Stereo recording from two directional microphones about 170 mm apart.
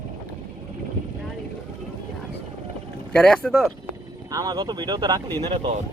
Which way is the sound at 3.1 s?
5° left (ahead or behind).